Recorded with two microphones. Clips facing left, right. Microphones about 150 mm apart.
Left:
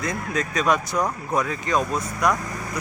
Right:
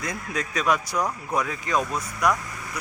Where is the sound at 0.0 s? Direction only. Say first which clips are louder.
Left 4 dB; 10° right (ahead or behind).